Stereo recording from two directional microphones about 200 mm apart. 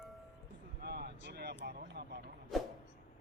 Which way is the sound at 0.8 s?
55° right (ahead or behind).